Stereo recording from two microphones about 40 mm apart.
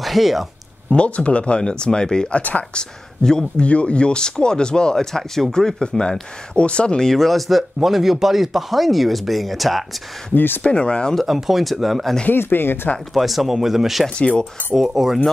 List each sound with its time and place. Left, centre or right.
0.0 s speech: centre
0.9 s speech: left; by 3.6 s centre
3.6 s speech: left
4.9 s speech: centre; by 7.0 s left
7.0 s speech: centre
10.3 s speech: left
10.6 s speech: left
11.1 s speech: centre
12.3 s speech: left
13.1 s speech: centre
14.1 s speech: left
14.8 s speech: centre